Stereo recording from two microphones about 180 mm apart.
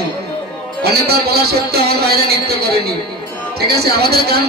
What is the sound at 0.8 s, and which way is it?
A man's voice, 60° right (ahead or behind).